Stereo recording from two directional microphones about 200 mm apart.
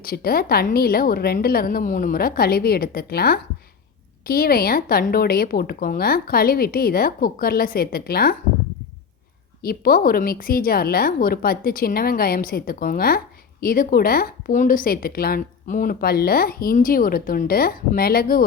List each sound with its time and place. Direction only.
0.0 s speech: 50° left (ahead or behind)
9.6 s speech: 45° left (ahead or behind)